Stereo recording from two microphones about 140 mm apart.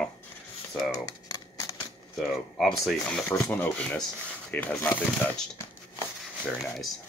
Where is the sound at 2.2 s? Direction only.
Centre (ahead or behind).